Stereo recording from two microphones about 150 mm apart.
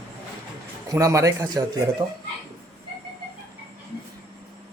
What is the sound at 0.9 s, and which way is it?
Speech, 20° right (ahead or behind).